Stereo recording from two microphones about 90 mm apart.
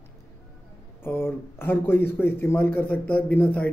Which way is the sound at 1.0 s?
25° left (ahead or behind).